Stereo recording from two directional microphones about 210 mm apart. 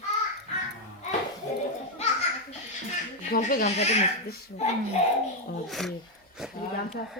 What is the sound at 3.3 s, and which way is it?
Baby laughter, 40° left (ahead or behind).